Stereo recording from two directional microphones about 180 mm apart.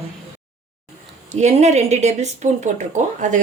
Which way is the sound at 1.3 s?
40° right (ahead or behind).